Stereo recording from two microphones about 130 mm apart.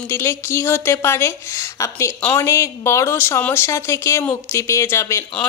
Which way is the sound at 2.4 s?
20° left (ahead or behind).